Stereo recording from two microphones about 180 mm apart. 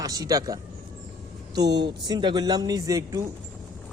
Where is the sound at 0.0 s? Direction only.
20° right (ahead or behind).